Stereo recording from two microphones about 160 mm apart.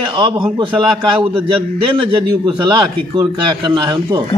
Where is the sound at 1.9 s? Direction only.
30° right (ahead or behind).